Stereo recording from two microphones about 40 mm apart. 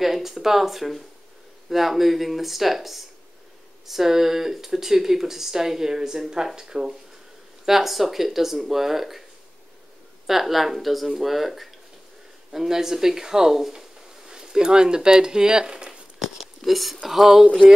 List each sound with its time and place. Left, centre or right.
0.0 s speech: centre
10.2 s speech: centre
16.2 s speech: centre